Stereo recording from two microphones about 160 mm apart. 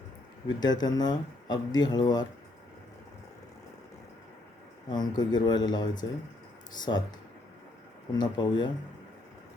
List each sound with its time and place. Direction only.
0.6 s speech: 25° left (ahead or behind)
4.9 s speech: 25° left (ahead or behind)
8.1 s speech: 25° left (ahead or behind)